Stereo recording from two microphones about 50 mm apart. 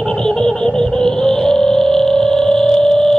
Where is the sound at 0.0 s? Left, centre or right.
Centre.